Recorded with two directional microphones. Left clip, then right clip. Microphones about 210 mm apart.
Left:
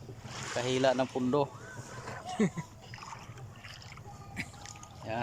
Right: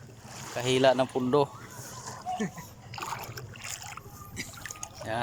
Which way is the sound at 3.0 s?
55° right (ahead or behind).